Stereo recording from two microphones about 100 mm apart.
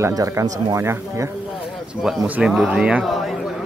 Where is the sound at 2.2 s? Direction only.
10° right (ahead or behind).